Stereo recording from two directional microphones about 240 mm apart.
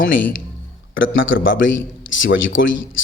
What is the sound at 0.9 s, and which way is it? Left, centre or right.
Speech, left.